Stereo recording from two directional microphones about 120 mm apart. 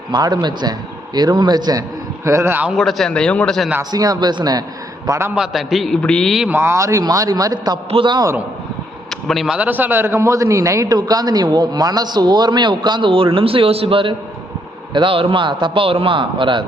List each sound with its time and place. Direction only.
0.1 s a man's voice: 35° right (ahead or behind)
2.2 s a man's voice: 25° right (ahead or behind)
2.7 s speech: centre (ahead or behind)
3.9 s a man's voice: 30° right (ahead or behind)
5.0 s a man's voice: 25° right (ahead or behind)
5.3 s speech: 5° right (ahead or behind)
6.5 s a man's voice: 20° right (ahead or behind)
7.9 s a man's voice: 45° right (ahead or behind)
9.0 s speech: centre (ahead or behind)
9.6 s a man's voice: 15° right (ahead or behind); by 16.6 s 45° right (ahead or behind)